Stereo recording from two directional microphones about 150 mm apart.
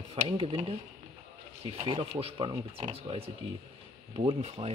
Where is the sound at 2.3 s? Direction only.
25° right (ahead or behind).